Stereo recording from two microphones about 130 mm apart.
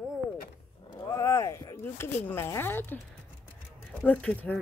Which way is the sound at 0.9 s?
25° left (ahead or behind).